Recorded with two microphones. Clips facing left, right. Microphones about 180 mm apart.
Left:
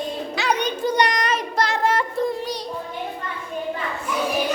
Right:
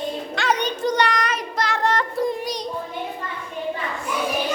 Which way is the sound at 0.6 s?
10° left (ahead or behind).